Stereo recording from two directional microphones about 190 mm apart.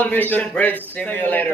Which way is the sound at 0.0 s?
10° left (ahead or behind).